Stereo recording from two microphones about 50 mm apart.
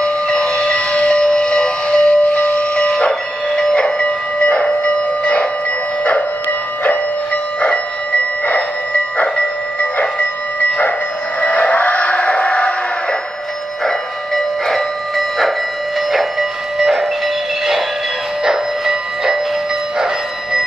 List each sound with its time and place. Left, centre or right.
0.4 s civil defense siren: centre
9.8 s train: left
11.4 s a sound: left
13.8 s train: centre
16.1 s music: centre
18.4 s a sound: centre